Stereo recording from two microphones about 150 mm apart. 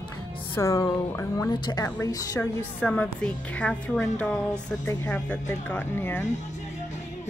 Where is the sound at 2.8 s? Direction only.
10° left (ahead or behind).